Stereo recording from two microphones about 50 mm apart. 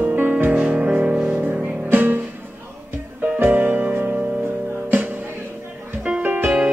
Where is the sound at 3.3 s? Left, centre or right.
Right.